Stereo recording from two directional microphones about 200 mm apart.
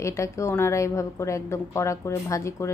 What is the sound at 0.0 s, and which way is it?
A woman's voice, 15° left (ahead or behind).